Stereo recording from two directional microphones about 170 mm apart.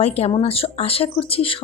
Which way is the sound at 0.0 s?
35° left (ahead or behind).